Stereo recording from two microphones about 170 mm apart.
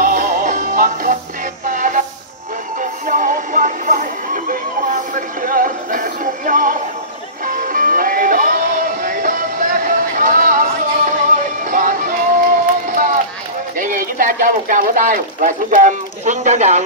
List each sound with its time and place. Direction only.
0.0 s music: 55° right (ahead or behind)
1.7 s train: 50° right (ahead or behind)
2.8 s music: 50° right (ahead or behind)
13.7 s a sound: 55° right (ahead or behind)